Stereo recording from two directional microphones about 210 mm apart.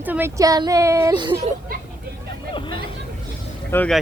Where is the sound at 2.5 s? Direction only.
25° left (ahead or behind).